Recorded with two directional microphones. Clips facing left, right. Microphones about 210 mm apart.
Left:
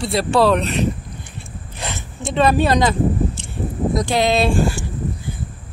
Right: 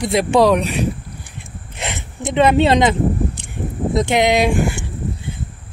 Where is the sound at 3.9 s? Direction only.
20° right (ahead or behind).